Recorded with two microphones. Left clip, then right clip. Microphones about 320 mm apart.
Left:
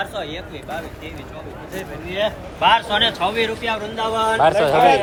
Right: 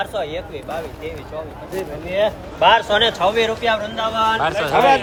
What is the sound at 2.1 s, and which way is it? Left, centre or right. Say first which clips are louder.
A man's voice: right 3 dB; right.